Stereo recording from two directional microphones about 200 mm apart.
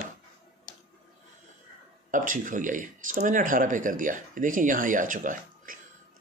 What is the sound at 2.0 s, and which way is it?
Speech, 40° right (ahead or behind).